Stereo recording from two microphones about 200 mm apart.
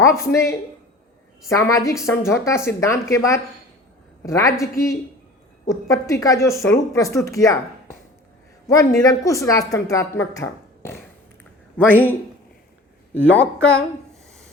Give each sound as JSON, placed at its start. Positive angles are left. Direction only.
{"t": 0.2, "sound": "speech", "side_deg": 15}
{"t": 13.3, "sound": "a woman's voice", "side_deg": 5}